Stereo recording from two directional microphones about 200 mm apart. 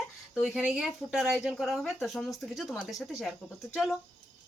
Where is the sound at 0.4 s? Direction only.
Centre (ahead or behind).